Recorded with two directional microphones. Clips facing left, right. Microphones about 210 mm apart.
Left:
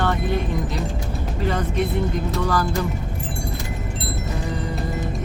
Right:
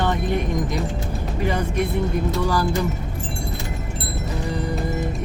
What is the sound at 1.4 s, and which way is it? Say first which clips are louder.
Speech: even; 10° right (ahead or behind).